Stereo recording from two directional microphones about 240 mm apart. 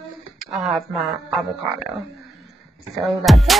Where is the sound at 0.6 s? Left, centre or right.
Centre.